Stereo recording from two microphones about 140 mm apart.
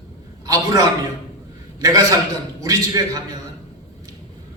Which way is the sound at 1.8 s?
25° right (ahead or behind).